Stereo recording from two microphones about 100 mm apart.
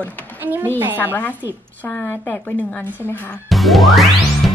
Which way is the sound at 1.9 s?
20° left (ahead or behind).